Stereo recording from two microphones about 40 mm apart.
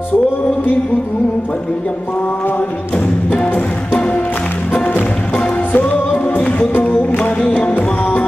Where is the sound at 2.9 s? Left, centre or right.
Left.